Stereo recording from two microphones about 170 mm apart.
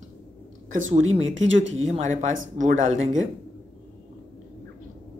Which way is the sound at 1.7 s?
40° right (ahead or behind).